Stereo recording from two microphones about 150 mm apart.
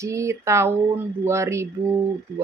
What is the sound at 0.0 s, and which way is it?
Speech, 20° right (ahead or behind).